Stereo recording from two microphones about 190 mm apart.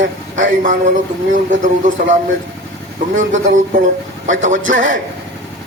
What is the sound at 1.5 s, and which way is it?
Speech, 40° right (ahead or behind).